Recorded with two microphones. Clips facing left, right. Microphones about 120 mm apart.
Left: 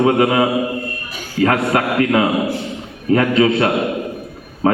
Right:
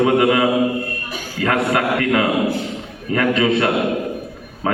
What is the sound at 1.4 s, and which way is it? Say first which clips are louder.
A man's voice: left 2 dB; 25° left (ahead or behind).